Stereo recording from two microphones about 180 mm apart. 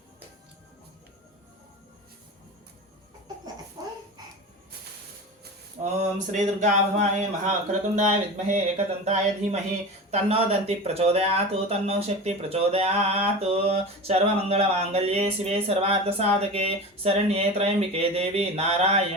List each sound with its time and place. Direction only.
3.8 s babbling: 20° right (ahead or behind)
5.8 s speech: 40° right (ahead or behind)